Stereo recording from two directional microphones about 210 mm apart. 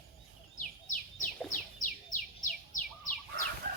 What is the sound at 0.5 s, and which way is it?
Bird, 35° left (ahead or behind).